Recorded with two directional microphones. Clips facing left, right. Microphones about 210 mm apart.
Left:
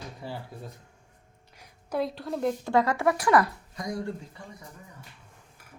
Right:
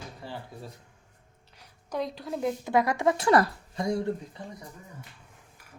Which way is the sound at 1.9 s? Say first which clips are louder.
Left 2 dB; 5° left (ahead or behind).